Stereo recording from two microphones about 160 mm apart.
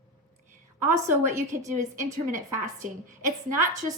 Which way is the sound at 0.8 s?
15° right (ahead or behind).